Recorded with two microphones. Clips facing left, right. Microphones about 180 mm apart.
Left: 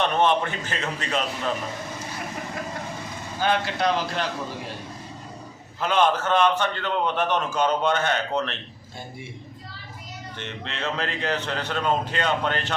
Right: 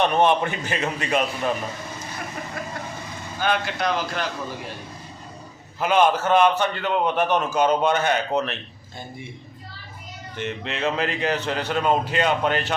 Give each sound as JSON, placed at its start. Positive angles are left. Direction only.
{"t": 0.0, "sound": "a man's voice", "side_deg": -15}
{"t": 3.4, "sound": "a man's voice", "side_deg": 30}
{"t": 5.8, "sound": "a man's voice", "side_deg": -10}
{"t": 10.3, "sound": "a man's voice", "side_deg": -10}